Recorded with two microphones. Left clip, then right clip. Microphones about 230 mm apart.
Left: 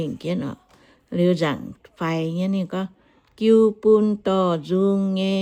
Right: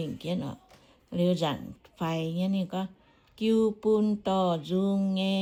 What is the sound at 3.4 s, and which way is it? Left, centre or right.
Speech, left.